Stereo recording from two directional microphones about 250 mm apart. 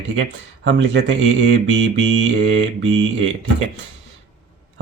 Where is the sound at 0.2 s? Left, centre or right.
Right.